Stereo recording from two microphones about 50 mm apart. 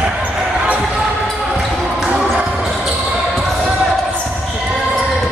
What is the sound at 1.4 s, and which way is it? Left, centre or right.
Basketball bounce, centre.